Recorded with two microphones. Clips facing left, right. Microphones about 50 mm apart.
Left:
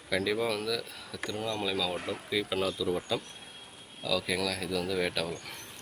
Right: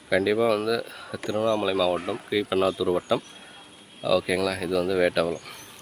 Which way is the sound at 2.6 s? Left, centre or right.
Right.